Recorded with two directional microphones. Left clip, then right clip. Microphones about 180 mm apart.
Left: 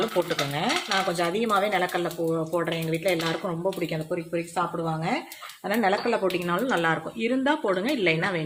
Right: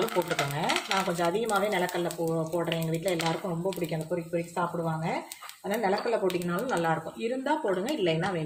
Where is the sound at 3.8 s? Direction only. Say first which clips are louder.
Left 3 dB; 45° left (ahead or behind).